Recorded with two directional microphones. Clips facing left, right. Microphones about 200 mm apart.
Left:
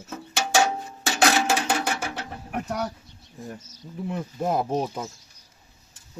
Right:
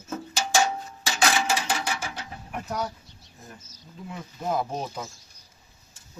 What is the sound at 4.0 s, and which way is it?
Speech, 60° left (ahead or behind).